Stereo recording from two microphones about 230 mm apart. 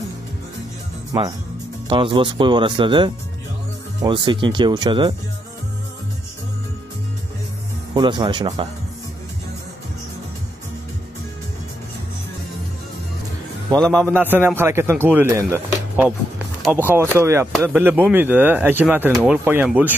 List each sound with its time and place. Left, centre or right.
1.9 s speech: right
7.9 s speech: centre
14.1 s speech: centre